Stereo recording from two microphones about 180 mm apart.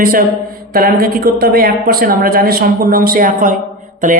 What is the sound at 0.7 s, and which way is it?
A woman's voice, 55° right (ahead or behind).